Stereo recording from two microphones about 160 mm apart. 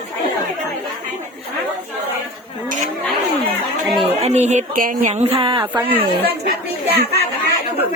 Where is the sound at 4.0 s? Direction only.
45° right (ahead or behind).